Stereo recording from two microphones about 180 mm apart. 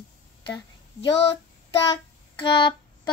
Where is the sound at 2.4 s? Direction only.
25° left (ahead or behind).